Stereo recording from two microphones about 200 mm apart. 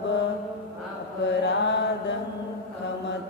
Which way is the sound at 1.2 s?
60° left (ahead or behind).